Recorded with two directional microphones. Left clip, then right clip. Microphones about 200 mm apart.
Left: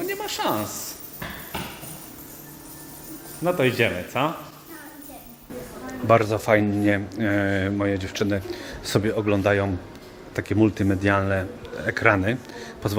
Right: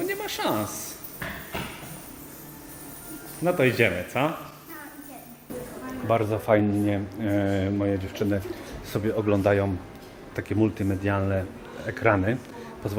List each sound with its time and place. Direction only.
0.0 s speech: centre (ahead or behind)
3.4 s a man's voice: centre (ahead or behind)
6.1 s a man's voice: 30° left (ahead or behind)